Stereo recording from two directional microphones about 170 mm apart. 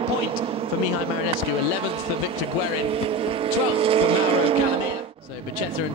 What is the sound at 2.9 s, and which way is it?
Speech, 35° right (ahead or behind).